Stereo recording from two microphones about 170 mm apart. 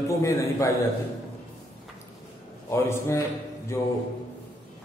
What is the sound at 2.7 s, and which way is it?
A man's voice, 15° left (ahead or behind).